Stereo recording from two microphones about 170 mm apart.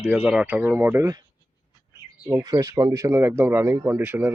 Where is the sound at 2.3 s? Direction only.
20° right (ahead or behind).